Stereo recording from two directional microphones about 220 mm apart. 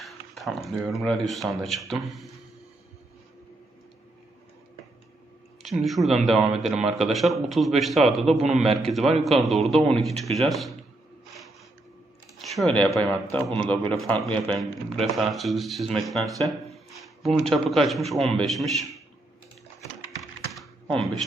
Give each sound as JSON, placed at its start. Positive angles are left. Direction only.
{"t": 0.0, "sound": "speech", "side_deg": 0}
{"t": 5.6, "sound": "speech", "side_deg": 0}
{"t": 8.4, "sound": "a man's voice", "side_deg": -30}
{"t": 8.7, "sound": "speech", "side_deg": 0}
{"t": 12.4, "sound": "a man's voice", "side_deg": 0}
{"t": 20.5, "sound": "computer keyboard", "side_deg": 0}